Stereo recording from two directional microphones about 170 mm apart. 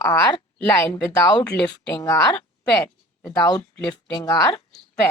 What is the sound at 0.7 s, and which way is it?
Speech, 10° left (ahead or behind).